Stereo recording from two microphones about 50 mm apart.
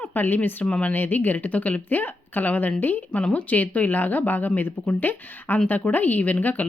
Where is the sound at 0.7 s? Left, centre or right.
Left.